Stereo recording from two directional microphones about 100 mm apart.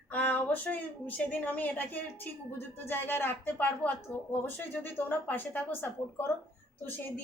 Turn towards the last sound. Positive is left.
turn(degrees=20)  # may be behind; listen again after turning